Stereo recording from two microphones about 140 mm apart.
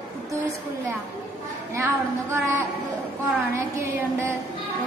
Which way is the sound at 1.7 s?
20° right (ahead or behind).